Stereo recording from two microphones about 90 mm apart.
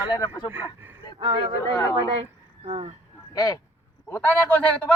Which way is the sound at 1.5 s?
40° left (ahead or behind).